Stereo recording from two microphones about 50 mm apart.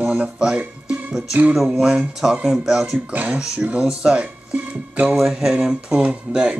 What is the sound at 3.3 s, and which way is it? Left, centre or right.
Speech, right.